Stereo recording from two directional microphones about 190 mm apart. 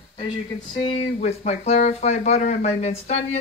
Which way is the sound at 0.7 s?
25° left (ahead or behind).